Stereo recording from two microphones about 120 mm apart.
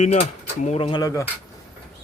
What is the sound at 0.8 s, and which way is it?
Speech, 35° left (ahead or behind).